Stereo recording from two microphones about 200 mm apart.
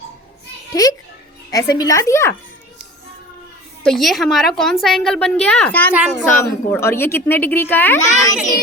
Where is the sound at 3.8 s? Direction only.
Centre (ahead or behind).